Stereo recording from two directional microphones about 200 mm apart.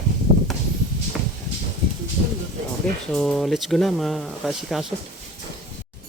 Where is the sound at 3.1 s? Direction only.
Centre (ahead or behind).